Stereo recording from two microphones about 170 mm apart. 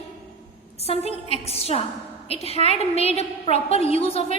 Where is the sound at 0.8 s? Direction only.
35° left (ahead or behind).